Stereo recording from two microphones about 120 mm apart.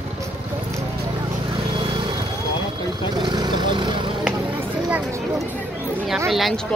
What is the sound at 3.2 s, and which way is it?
Vehicle, 35° right (ahead or behind).